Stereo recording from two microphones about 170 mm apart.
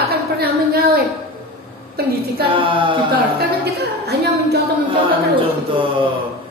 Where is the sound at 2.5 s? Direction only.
30° right (ahead or behind).